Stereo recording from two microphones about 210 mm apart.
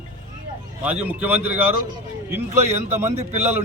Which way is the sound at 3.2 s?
30° right (ahead or behind).